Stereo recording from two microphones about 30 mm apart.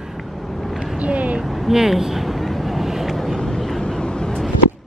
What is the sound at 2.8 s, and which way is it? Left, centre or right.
Vehicle, centre.